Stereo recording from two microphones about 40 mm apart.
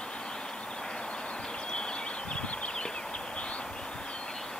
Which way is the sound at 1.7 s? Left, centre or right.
Left.